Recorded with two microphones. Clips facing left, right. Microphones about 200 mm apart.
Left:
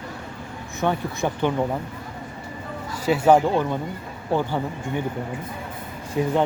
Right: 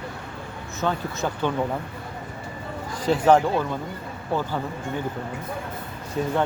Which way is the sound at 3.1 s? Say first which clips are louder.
Left 1 dB; 10° left (ahead or behind).